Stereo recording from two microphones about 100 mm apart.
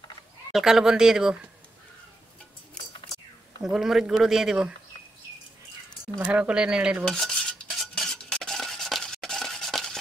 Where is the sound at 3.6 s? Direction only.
5° right (ahead or behind).